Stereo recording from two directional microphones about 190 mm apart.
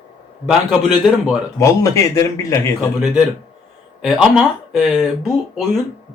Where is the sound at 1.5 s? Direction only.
15° left (ahead or behind).